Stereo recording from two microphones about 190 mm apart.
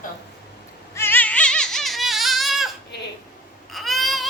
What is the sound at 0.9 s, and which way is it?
Music, 10° left (ahead or behind).